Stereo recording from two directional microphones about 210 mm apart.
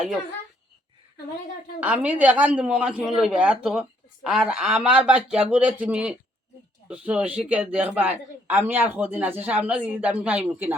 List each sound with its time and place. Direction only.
1.8 s a man's voice: 5° right (ahead or behind)